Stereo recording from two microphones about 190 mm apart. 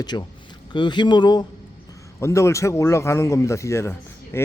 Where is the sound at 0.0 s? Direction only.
20° left (ahead or behind).